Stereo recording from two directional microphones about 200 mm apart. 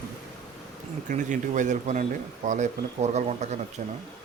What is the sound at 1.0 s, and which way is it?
Speech, 40° right (ahead or behind).